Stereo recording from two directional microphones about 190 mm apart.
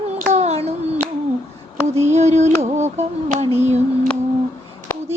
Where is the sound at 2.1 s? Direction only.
35° right (ahead or behind).